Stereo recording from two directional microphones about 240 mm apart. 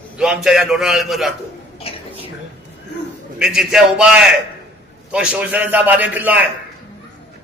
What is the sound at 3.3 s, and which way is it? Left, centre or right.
A man's voice, centre.